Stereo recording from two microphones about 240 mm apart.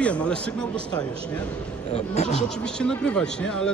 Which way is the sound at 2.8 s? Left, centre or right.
Centre.